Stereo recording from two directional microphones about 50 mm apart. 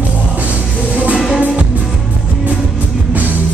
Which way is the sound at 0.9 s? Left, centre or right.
Right.